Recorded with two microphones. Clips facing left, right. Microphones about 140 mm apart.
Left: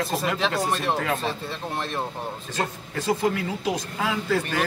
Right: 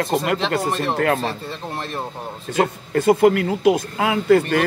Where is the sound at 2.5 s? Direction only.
55° right (ahead or behind).